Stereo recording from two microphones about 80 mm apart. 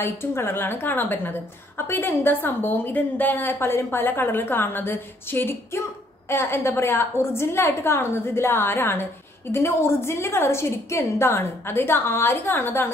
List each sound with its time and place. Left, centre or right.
0.0 s a woman's voice: left